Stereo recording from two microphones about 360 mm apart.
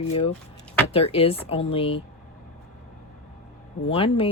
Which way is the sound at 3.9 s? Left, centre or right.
Centre.